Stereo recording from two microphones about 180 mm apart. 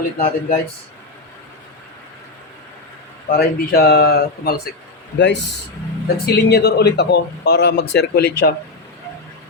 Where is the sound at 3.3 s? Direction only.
60° left (ahead or behind).